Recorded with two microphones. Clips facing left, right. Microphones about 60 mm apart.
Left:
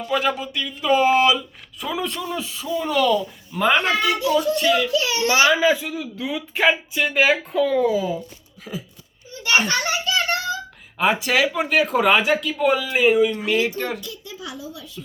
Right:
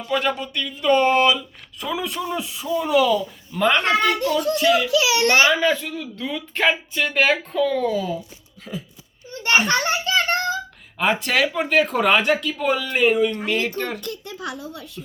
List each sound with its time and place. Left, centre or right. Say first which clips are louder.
0.0 s speech: left 1 dB; centre
2.1 s speech: right 1 dB; centre
4.9 s a child's voice: right 3 dB; right
5.5 s speech: left 2 dB; centre
9.6 s a sound: right 2 dB; right
10.9 s speech: left 1 dB; centre
14.0 s a child's voice: right 4 dB; right